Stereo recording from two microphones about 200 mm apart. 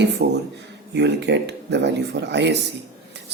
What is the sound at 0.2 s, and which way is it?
Speech, 50° right (ahead or behind).